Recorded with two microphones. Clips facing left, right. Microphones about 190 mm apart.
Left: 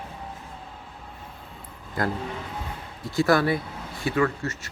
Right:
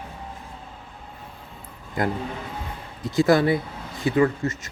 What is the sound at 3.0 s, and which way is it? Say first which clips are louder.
Speech: right 3 dB; 20° right (ahead or behind).